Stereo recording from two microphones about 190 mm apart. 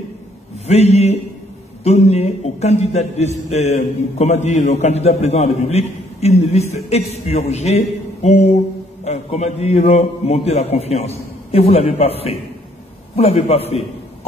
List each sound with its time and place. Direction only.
0.7 s a man's voice: 35° left (ahead or behind)